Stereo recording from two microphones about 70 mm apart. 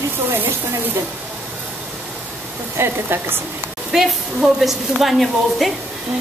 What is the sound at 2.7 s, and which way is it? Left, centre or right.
Speech, right.